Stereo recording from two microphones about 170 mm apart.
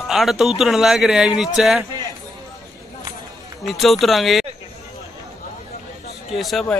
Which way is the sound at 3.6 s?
Centre (ahead or behind).